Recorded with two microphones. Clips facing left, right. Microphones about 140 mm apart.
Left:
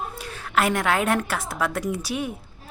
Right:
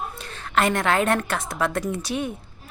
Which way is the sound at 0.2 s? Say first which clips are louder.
Right 1 dB; 5° left (ahead or behind).